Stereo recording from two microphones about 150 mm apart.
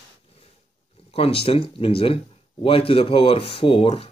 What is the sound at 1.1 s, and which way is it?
Speech, 40° left (ahead or behind).